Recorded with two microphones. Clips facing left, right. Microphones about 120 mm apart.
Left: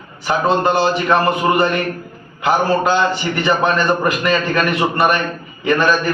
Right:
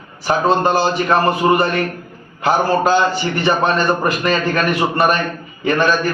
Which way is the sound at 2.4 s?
40° right (ahead or behind).